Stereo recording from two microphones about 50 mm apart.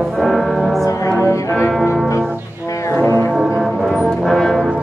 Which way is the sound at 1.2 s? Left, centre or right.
Left.